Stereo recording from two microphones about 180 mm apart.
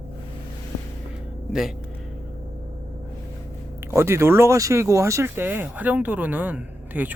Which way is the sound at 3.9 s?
15° right (ahead or behind).